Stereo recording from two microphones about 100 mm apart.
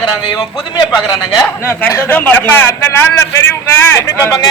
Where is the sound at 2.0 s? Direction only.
20° left (ahead or behind).